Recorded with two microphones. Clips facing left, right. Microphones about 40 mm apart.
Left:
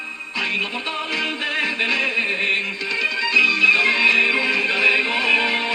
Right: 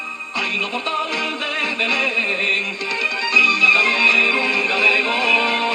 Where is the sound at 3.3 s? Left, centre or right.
Right.